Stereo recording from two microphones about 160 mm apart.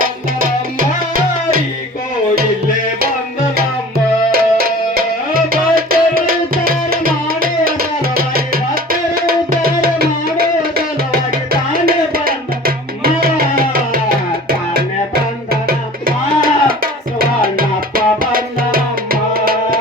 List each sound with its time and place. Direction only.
0.0 s music: 60° right (ahead or behind)
4.3 s music: 70° right (ahead or behind)